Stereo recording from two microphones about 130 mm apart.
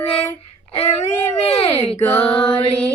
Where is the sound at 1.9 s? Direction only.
15° left (ahead or behind).